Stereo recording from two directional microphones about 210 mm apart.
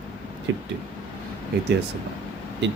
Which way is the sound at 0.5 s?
60° right (ahead or behind).